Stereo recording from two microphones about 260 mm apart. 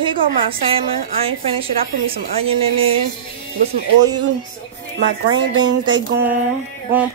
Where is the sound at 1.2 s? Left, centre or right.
Right.